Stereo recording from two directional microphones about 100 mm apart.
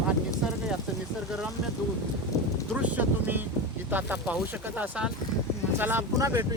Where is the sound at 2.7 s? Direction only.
15° right (ahead or behind).